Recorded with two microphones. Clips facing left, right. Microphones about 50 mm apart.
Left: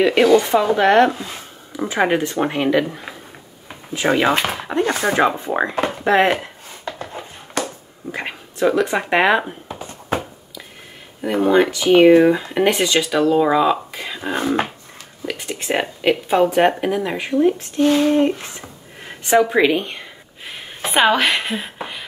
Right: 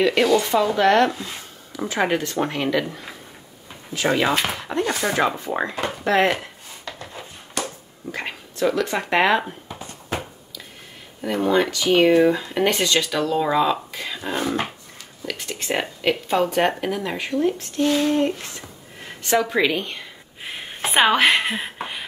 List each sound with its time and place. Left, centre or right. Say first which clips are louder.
0.0 s speech: left 4 dB; centre
3.9 s speech: left 3 dB; left
5.9 s a sound: left 3 dB; left
8.1 s speech: left 2 dB; centre
9.8 s a sound: left 6 dB; left
11.1 s speech: left 4 dB; centre
20.9 s a woman's voice: left 1 dB; centre
21.5 s beatboxing: left 1 dB; centre